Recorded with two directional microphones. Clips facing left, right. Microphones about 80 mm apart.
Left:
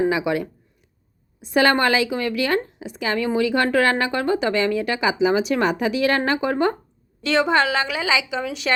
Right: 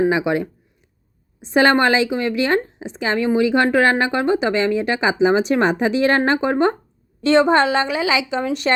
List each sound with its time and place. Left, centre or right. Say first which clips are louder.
0.1 s a woman's voice: right 3 dB; right
8.0 s a woman's voice: right 2 dB; centre
8.3 s a woman's voice: right 5 dB; right